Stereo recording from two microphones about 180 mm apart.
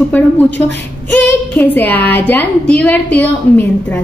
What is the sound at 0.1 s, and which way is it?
A woman's voice, 10° left (ahead or behind).